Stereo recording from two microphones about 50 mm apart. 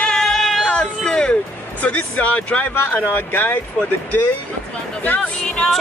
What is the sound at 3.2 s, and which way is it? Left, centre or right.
Speech, left.